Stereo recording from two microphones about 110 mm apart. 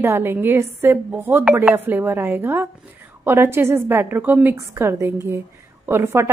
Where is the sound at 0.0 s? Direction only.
20° right (ahead or behind).